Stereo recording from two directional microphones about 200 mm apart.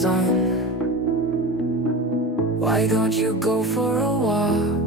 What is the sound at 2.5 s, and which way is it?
Music, centre (ahead or behind).